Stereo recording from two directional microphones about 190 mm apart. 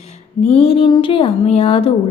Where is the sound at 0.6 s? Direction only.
30° left (ahead or behind).